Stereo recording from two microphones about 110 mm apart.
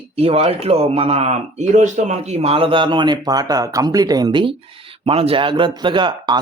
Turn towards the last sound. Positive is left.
turn(degrees=-45)  # may be behind; listen again after turning